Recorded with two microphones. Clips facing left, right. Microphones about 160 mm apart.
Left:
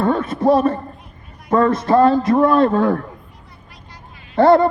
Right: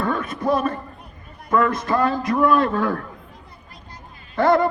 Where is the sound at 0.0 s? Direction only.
25° left (ahead or behind).